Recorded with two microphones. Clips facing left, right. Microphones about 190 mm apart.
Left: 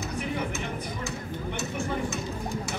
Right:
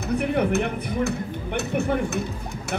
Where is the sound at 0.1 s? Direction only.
60° right (ahead or behind).